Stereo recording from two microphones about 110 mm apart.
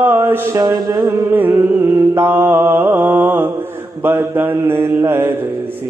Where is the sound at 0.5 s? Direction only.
35° right (ahead or behind).